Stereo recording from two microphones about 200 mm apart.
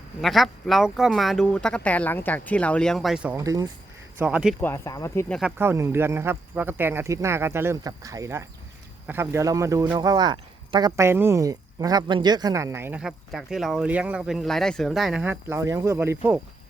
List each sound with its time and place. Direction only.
0.2 s speech: centre (ahead or behind)
3.4 s speech: 15° right (ahead or behind)
4.2 s speech: 5° right (ahead or behind)
4.6 s speech: 15° left (ahead or behind)
5.3 s speech: 5° right (ahead or behind)